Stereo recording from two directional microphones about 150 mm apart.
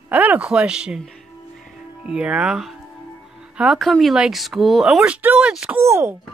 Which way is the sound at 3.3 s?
5° right (ahead or behind).